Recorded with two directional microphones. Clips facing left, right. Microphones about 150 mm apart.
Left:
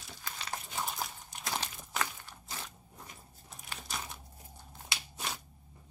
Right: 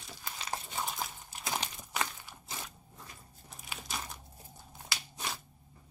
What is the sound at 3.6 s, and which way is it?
Crumpling, centre (ahead or behind).